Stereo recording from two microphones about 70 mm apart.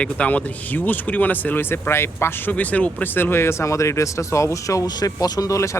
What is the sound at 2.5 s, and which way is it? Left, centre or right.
Speech, left.